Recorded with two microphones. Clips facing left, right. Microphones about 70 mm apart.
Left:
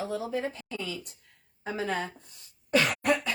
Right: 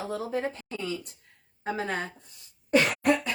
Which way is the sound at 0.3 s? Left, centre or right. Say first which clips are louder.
Right 1 dB; right.